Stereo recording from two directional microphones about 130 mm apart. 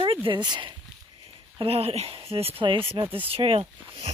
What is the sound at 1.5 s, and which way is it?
Speech, 50° right (ahead or behind).